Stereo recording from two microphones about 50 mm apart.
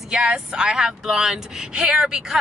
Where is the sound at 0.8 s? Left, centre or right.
Centre.